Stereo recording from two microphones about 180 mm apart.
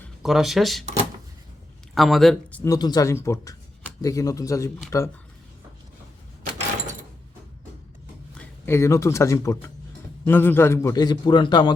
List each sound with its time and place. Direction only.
0.2 s speech: centre (ahead or behind)
2.0 s speech: centre (ahead or behind)
2.6 s a man's voice: 20° left (ahead or behind)
8.4 s a man's voice: 15° left (ahead or behind)